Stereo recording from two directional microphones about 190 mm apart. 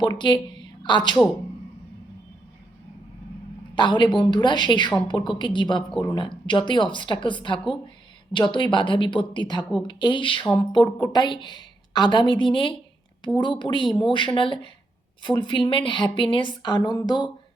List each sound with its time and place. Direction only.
0.0 s a woman's voice: 25° left (ahead or behind)
3.8 s speech: 25° left (ahead or behind)